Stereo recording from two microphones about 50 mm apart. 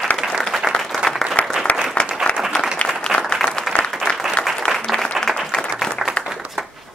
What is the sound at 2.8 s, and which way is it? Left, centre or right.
Applause, left.